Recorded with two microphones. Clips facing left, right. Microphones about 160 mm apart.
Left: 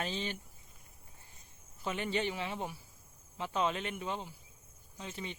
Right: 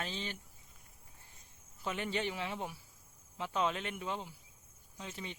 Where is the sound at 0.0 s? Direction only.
15° left (ahead or behind).